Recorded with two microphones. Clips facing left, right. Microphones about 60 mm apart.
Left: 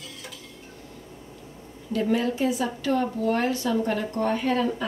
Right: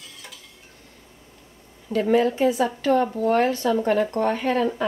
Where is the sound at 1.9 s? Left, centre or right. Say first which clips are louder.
Right 5 dB; right.